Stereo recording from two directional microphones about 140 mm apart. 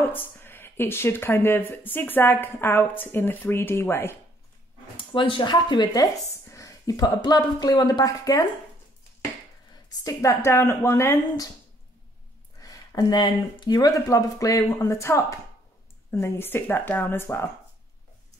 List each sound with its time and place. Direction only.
0.0 s speech: 15° left (ahead or behind)
4.9 s speech: 35° left (ahead or behind)
10.0 s speech: 20° left (ahead or behind)
12.5 s speech: 25° left (ahead or behind)